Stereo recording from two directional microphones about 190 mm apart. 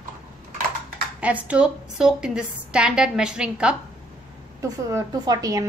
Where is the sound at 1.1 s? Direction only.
5° right (ahead or behind).